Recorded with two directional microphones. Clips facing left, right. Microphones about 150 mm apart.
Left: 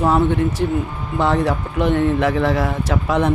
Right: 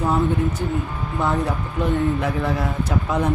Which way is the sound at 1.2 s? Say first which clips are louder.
Left 5 dB; 80° left.